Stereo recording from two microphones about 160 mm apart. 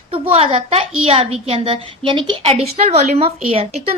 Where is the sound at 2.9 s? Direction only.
45° right (ahead or behind).